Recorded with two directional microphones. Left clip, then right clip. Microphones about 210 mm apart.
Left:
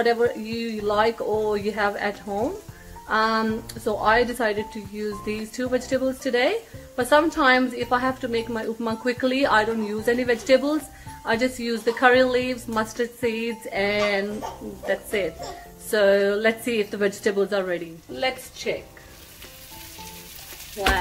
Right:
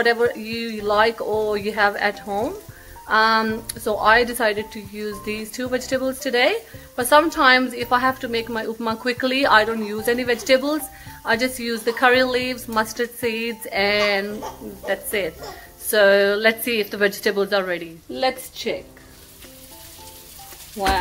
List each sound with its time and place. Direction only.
0.0 s a woman's voice: 5° left (ahead or behind)
18.1 s a woman's voice: 40° right (ahead or behind)